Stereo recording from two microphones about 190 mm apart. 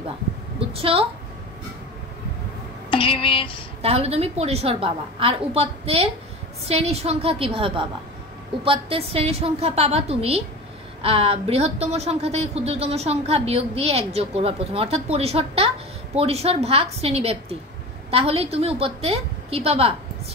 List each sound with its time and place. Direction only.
0.7 s a woman's voice: 30° right (ahead or behind)
2.9 s speech: 30° left (ahead or behind)
3.8 s a woman's voice: 30° right (ahead or behind)